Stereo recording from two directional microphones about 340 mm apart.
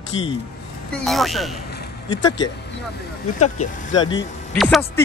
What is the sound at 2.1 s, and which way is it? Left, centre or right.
Speech, centre.